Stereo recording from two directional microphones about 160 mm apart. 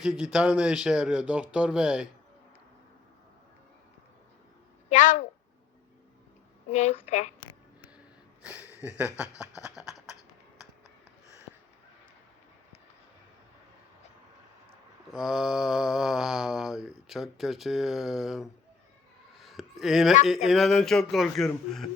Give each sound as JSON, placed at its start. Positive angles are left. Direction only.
{"t": 0.0, "sound": "mantra", "side_deg": -5}
{"t": 4.9, "sound": "a woman's voice", "side_deg": 55}
{"t": 6.7, "sound": "a woman's voice", "side_deg": 45}
{"t": 8.4, "sound": "a sound", "side_deg": -5}
{"t": 9.6, "sound": "beatboxing", "side_deg": 0}
{"t": 15.1, "sound": "mantra", "side_deg": -5}
{"t": 19.4, "sound": "a sound", "side_deg": 0}
{"t": 20.2, "sound": "mantra", "side_deg": 0}